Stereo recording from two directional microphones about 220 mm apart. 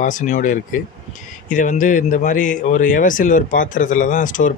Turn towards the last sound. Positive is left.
turn(degrees=35)  # may be behind; listen again after turning